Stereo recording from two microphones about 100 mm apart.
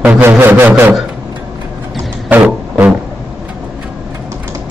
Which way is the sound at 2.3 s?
15° right (ahead or behind).